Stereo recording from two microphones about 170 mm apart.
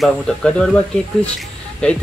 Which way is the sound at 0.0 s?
5° left (ahead or behind).